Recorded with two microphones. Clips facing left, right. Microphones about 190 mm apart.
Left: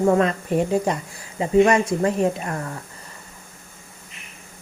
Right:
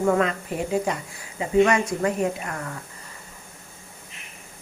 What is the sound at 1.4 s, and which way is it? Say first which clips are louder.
Speech: left 3 dB; 30° left (ahead or behind).